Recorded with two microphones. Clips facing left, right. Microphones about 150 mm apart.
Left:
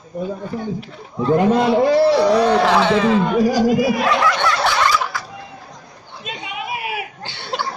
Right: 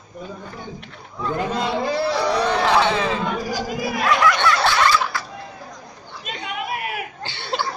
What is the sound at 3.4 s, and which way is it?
Speech, 75° left (ahead or behind).